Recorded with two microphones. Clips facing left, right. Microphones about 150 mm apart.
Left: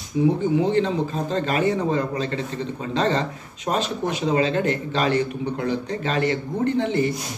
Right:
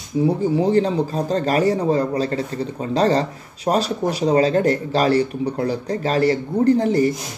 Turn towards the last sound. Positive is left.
turn(degrees=-40)  # may be behind; listen again after turning